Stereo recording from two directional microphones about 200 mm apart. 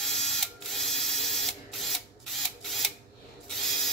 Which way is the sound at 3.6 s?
Centre (ahead or behind).